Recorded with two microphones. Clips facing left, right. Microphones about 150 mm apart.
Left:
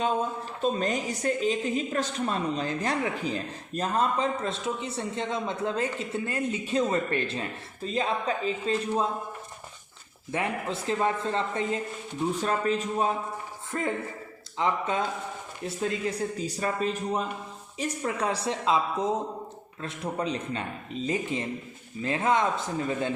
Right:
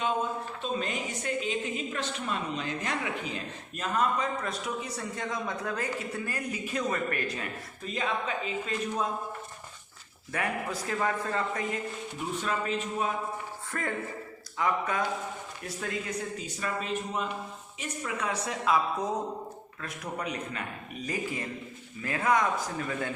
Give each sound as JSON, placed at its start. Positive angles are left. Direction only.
{"t": 0.6, "sound": "a woman's voice", "side_deg": 40}
{"t": 10.3, "sound": "a man's voice", "side_deg": 25}
{"t": 12.4, "sound": "a woman's voice", "side_deg": 40}
{"t": 13.7, "sound": "a man's voice", "side_deg": 20}
{"t": 16.4, "sound": "a woman's voice", "side_deg": 35}